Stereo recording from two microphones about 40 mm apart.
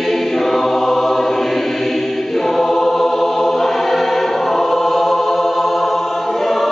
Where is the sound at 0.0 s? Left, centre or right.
Centre.